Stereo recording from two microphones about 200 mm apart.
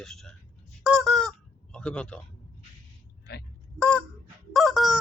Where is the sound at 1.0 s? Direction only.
Centre (ahead or behind).